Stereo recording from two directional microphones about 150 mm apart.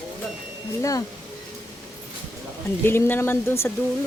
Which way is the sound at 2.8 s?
15° left (ahead or behind).